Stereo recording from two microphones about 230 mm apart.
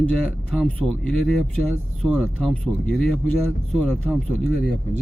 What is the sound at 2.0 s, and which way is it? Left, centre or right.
Speech, centre.